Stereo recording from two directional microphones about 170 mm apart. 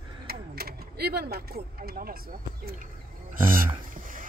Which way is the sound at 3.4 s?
55° right (ahead or behind).